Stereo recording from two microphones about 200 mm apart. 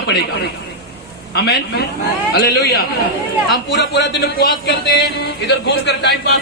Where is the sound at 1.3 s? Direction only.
55° left (ahead or behind).